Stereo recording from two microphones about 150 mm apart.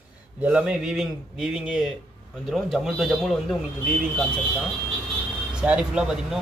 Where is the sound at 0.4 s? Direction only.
5° right (ahead or behind).